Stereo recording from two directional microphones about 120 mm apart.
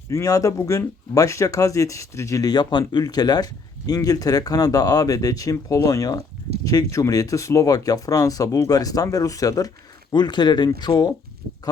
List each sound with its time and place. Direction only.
0.1 s speech: 25° left (ahead or behind)